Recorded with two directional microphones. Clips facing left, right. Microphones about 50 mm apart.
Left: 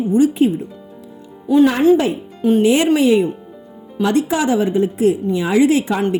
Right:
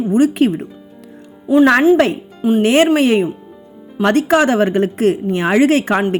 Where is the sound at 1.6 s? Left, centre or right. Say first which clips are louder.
Right 3 dB; right.